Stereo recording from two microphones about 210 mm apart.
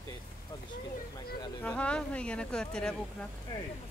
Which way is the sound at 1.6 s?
5° left (ahead or behind).